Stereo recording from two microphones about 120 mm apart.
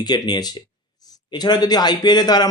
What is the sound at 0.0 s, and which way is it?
Speech, 35° left (ahead or behind).